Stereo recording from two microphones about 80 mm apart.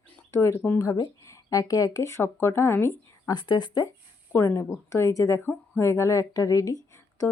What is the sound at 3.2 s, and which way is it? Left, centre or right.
Speech, left.